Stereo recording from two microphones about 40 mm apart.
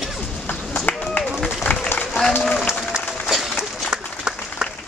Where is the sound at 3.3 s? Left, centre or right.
Centre.